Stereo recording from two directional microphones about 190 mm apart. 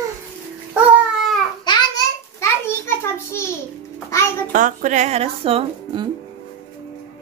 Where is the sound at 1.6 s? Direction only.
20° left (ahead or behind).